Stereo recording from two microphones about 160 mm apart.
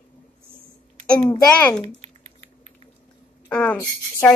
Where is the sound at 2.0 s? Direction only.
45° right (ahead or behind).